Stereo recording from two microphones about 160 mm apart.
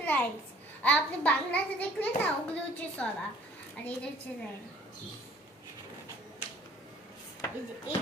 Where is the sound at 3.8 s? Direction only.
10° left (ahead or behind).